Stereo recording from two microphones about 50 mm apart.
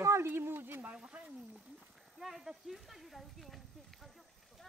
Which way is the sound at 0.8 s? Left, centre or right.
Right.